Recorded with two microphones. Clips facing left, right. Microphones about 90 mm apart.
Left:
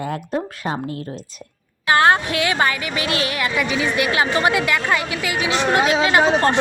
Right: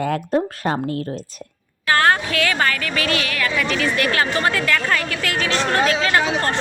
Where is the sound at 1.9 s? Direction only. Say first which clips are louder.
Left 2 dB; 20° left (ahead or behind).